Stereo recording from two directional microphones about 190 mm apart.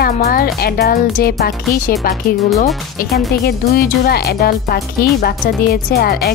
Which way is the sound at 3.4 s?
55° left (ahead or behind).